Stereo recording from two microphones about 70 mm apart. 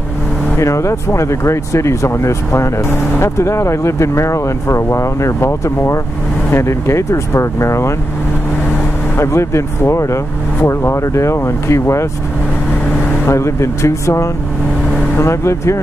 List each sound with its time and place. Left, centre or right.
0.6 s speech: left
9.1 s speech: left
13.3 s speech: left